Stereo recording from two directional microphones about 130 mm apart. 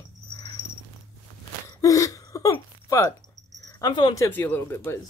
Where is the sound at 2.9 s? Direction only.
25° left (ahead or behind).